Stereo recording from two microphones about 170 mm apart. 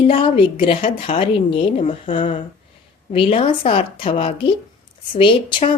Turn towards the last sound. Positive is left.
turn(degrees=30)  # may be behind; listen again after turning